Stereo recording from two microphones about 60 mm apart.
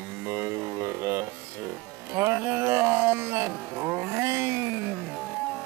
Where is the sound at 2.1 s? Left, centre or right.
Right.